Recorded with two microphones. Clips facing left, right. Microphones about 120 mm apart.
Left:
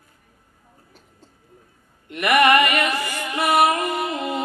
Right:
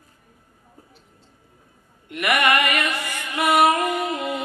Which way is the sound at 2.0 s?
30° left (ahead or behind).